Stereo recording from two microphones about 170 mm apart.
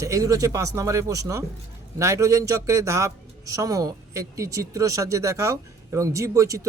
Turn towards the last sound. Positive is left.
turn(degrees=-20)  # may be behind; listen again after turning